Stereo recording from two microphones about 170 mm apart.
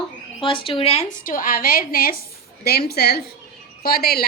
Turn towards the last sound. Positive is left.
turn(degrees=65)  # may be behind; listen again after turning